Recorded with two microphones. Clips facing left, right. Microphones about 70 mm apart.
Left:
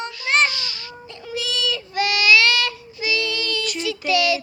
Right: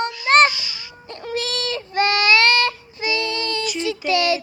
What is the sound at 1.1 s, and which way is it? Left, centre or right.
Child singing, right.